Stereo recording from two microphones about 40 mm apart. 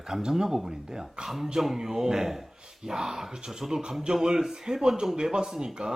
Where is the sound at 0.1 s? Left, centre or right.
Centre.